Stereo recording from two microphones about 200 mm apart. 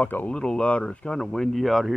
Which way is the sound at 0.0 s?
10° left (ahead or behind).